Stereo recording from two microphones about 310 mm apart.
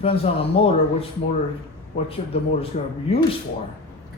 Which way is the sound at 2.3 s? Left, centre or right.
Centre.